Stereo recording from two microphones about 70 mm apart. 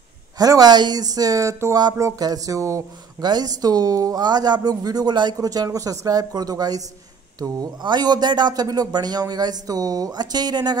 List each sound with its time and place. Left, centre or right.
0.4 s speech: right
2.1 s speech: right
3.2 s speech: right
7.3 s speech: right